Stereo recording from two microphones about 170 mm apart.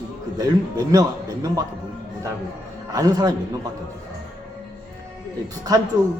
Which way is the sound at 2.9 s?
20° right (ahead or behind).